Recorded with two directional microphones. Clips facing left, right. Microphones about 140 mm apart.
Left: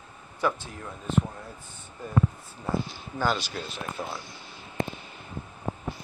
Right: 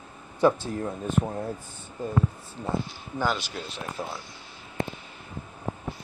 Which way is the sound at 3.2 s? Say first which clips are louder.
Even; 15° right (ahead or behind).